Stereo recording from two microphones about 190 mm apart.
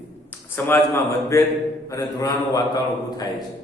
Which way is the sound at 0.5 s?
15° left (ahead or behind).